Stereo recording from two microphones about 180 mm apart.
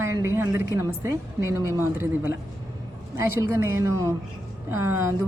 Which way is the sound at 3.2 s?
15° right (ahead or behind).